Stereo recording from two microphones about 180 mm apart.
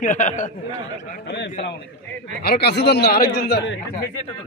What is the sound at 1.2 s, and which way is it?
Speech, 75° left (ahead or behind).